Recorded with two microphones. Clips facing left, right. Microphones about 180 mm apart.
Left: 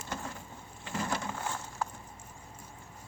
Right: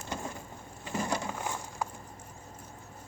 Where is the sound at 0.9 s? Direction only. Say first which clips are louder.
Right 2 dB; 15° right (ahead or behind).